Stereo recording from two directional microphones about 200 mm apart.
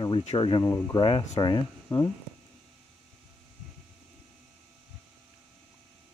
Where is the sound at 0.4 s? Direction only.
20° left (ahead or behind).